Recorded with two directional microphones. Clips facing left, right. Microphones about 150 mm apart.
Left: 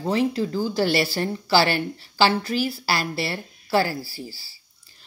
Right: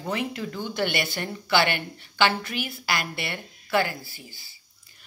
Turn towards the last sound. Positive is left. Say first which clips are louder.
# left 10 dB
turn(degrees=35)  # may be behind; listen again after turning